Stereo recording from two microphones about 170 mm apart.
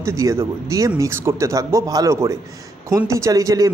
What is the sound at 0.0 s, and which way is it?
Speech, 15° right (ahead or behind).